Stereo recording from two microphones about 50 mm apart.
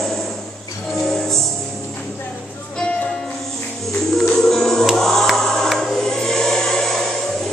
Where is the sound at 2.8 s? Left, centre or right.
Left.